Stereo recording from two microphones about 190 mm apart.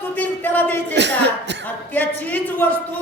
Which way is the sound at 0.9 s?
65° right (ahead or behind).